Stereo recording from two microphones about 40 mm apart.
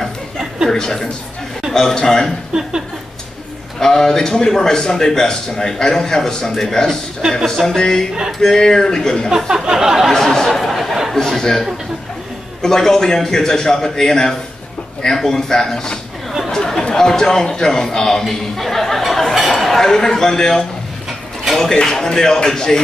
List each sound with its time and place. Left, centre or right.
0.7 s a man's voice: centre
2.5 s a sound: centre
3.8 s a man's voice: centre
7.2 s a sound: centre
7.4 s a man's voice: centre
9.5 s a sound: centre
10.1 s a sound: centre
11.2 s a man's voice: centre
12.6 s a man's voice: centre
16.4 s chatter: centre
16.9 s a man's voice: centre
21.7 s a man's voice: centre